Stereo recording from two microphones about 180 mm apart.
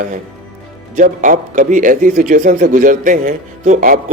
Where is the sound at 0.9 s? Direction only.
45° right (ahead or behind).